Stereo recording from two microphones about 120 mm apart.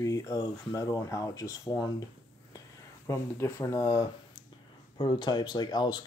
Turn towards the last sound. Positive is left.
turn(degrees=35)  # may be behind; listen again after turning